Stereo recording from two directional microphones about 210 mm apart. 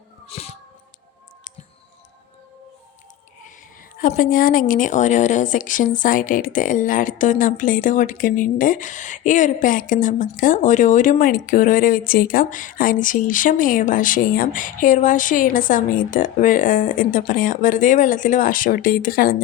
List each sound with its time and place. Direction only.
0.3 s music: 30° left (ahead or behind)
4.0 s a woman's voice: 40° left (ahead or behind)